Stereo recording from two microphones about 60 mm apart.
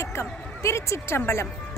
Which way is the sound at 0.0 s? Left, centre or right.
Left.